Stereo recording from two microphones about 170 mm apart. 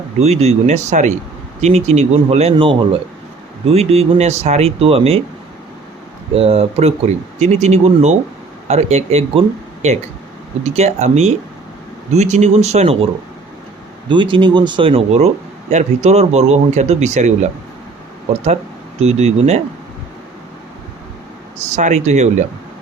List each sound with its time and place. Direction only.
0.2 s speech: 40° right (ahead or behind)
6.3 s speech: 35° right (ahead or behind)
14.1 s speech: 30° right (ahead or behind)
21.6 s speech: 45° right (ahead or behind)